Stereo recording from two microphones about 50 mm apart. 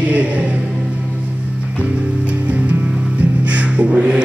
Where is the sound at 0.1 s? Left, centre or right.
Right.